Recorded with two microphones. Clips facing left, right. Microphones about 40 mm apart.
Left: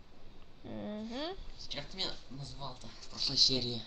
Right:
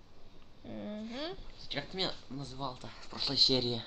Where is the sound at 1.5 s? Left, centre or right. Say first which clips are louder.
Right 5 dB; right.